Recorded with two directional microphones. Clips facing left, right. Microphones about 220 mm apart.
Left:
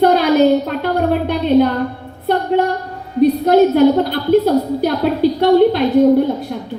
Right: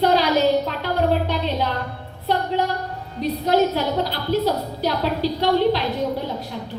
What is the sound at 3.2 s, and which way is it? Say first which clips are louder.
A woman's voice: left 9 dB; 55° left (ahead or behind).